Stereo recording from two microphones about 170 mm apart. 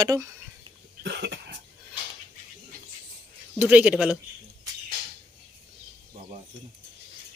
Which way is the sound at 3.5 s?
10° right (ahead or behind).